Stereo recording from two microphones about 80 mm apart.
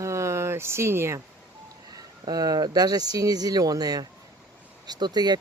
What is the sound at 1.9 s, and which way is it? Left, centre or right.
Speech, right.